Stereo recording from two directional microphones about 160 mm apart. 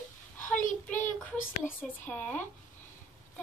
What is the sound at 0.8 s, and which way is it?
A child's voice, 10° left (ahead or behind).